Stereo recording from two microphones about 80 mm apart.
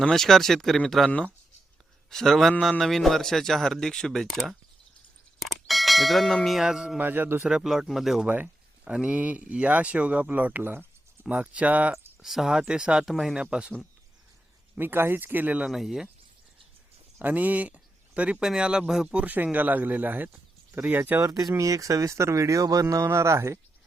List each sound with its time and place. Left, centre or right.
0.0 s a man's voice: centre
7.0 s speech: right
7.4 s a man's voice: centre
8.3 s speech: centre
12.2 s speech: centre
14.8 s speech: right
15.7 s a man's voice: centre
17.2 s speech: right
21.2 s speech: right
23.0 s speech: right